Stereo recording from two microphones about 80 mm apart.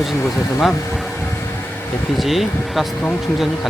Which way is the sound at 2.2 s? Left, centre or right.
Centre.